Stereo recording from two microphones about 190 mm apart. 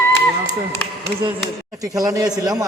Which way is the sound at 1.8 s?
20° right (ahead or behind).